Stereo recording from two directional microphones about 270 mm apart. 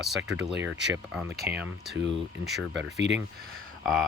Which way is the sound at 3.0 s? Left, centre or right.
Right.